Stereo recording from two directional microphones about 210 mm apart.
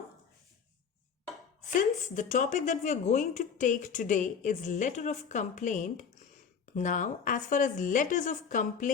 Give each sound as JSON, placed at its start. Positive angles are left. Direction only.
{"t": 2.0, "sound": "a woman's voice", "side_deg": 35}